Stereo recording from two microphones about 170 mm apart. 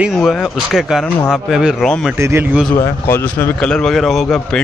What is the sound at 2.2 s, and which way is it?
Speech, 15° right (ahead or behind).